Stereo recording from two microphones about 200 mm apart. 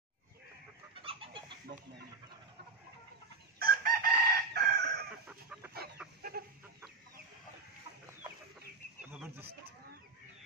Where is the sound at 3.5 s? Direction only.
45° right (ahead or behind).